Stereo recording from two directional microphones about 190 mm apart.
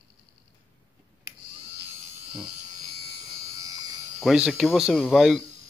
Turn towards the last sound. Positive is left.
turn(degrees=0)  # may be behind; listen again after turning